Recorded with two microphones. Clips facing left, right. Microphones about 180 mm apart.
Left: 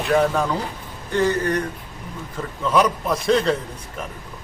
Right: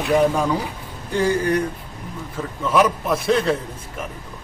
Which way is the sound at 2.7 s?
5° right (ahead or behind).